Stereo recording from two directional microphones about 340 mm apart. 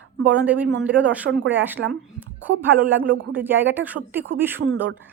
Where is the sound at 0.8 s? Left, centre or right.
Centre.